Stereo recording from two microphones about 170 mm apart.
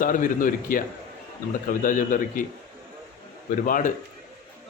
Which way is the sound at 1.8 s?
50° left (ahead or behind).